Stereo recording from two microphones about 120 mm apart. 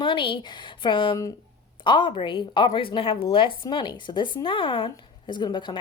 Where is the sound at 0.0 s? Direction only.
45° left (ahead or behind).